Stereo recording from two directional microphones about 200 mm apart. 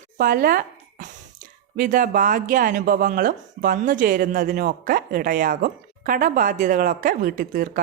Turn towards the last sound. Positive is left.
turn(degrees=-40)  # may be behind; listen again after turning